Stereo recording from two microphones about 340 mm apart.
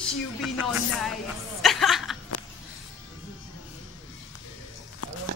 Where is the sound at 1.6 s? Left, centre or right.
Centre.